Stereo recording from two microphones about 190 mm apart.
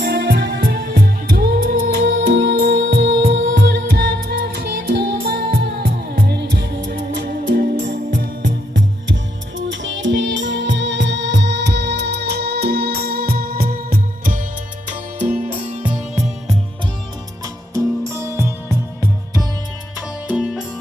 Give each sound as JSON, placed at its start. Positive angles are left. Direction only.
{"t": 0.0, "sound": "music", "side_deg": -60}
{"t": 3.5, "sound": "music", "side_deg": -50}
{"t": 8.4, "sound": "music", "side_deg": -75}
{"t": 14.8, "sound": "music", "side_deg": -35}
{"t": 17.4, "sound": "music", "side_deg": -15}
{"t": 20.2, "sound": "music", "side_deg": -5}